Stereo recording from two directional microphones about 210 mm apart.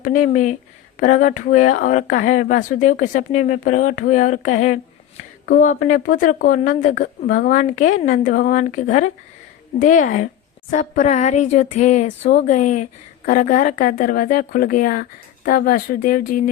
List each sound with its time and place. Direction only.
0.0 s speech: 35° left (ahead or behind)